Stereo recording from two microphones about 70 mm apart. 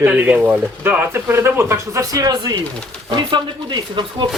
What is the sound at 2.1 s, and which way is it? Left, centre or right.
Speech, right.